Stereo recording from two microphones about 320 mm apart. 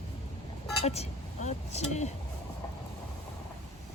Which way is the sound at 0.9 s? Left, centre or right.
Left.